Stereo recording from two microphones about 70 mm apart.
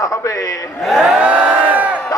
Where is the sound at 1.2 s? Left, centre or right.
Centre.